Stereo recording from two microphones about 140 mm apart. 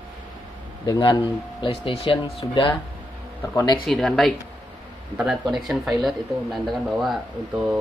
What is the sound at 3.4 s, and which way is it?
Speech, 20° left (ahead or behind).